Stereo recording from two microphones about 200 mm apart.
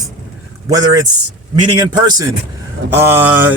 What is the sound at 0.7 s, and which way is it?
Speech, 20° right (ahead or behind).